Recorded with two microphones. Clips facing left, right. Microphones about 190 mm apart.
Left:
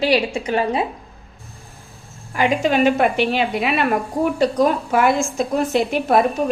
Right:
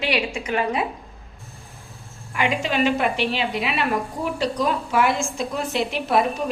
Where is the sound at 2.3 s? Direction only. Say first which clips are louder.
Left 5 dB; 45° left (ahead or behind).